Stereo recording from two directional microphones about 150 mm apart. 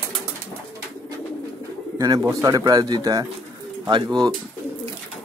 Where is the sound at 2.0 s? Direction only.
25° right (ahead or behind).